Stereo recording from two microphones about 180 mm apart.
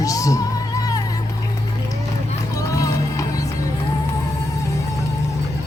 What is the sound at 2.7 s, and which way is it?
Music, 20° left (ahead or behind).